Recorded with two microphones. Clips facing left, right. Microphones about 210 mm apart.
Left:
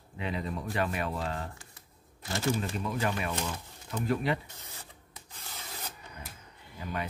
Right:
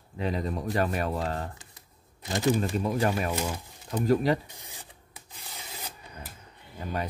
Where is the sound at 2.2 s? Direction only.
15° right (ahead or behind).